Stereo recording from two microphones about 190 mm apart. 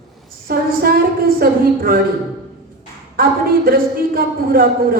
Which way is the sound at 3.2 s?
50° right (ahead or behind).